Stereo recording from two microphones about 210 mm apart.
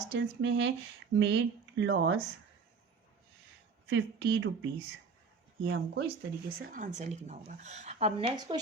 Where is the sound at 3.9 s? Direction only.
60° right (ahead or behind).